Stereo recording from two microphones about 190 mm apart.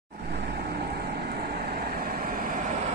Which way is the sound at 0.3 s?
60° right (ahead or behind).